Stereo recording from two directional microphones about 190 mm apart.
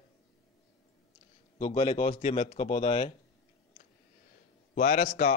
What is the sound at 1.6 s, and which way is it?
A man's voice, 30° left (ahead or behind).